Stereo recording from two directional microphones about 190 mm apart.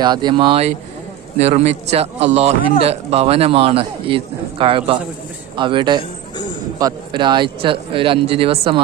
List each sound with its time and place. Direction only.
0.0 s a man's voice: 25° right (ahead or behind)